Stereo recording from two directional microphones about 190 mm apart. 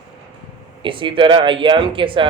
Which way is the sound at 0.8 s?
25° right (ahead or behind).